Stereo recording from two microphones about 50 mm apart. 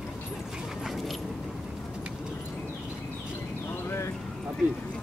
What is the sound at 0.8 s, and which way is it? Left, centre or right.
Keys jangling, centre.